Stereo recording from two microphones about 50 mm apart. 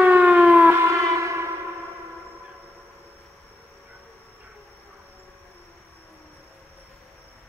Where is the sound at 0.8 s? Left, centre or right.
Right.